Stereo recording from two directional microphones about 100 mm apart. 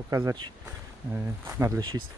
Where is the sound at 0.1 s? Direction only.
40° right (ahead or behind).